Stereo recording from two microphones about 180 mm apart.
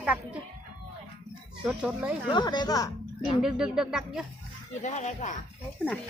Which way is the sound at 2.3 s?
25° left (ahead or behind).